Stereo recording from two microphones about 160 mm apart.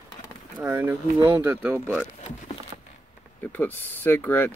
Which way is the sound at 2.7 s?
30° right (ahead or behind).